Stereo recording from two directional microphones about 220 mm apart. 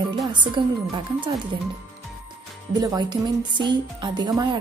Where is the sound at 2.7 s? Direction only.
15° right (ahead or behind).